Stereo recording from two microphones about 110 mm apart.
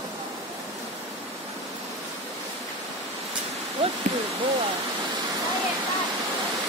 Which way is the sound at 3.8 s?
50° right (ahead or behind).